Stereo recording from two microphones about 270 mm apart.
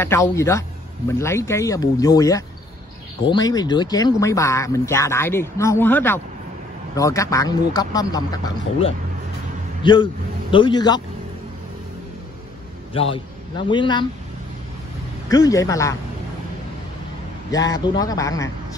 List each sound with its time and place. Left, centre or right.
0.0 s speech: centre
9.8 s speech: centre
12.9 s a man's voice: centre
15.2 s speech: centre
17.5 s speech: centre